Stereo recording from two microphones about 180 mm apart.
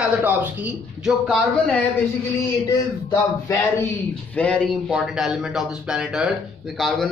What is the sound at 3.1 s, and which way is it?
Speech, 15° left (ahead or behind).